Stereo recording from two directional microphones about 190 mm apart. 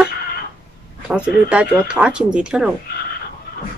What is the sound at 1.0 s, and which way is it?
Speech, 5° right (ahead or behind).